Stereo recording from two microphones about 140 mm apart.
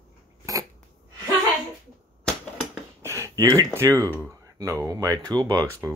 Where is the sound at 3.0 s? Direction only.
20° right (ahead or behind).